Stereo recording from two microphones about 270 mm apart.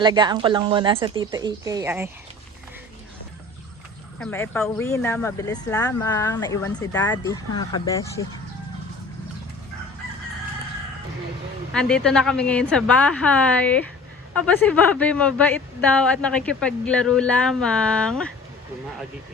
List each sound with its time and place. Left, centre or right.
0.0 s a woman's voice: centre
4.2 s speech: centre
11.7 s speech: centre